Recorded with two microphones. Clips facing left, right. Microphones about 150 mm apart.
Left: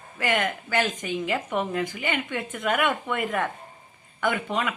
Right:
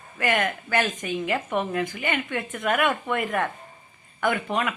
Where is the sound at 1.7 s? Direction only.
50° right (ahead or behind).